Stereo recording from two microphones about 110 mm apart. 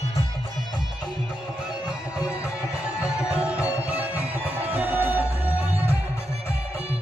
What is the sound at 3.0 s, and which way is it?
Music, 10° right (ahead or behind).